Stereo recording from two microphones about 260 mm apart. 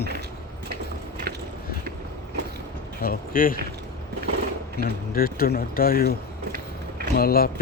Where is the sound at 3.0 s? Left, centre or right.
Left.